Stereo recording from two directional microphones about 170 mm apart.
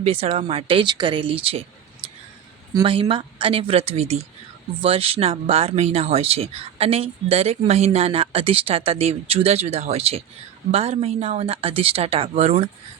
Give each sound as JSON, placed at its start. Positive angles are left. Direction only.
{"t": 0.0, "sound": "speech", "side_deg": -35}
{"t": 2.7, "sound": "speech", "side_deg": -30}